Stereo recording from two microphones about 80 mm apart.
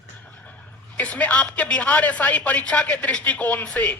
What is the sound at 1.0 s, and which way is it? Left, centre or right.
Speech, centre.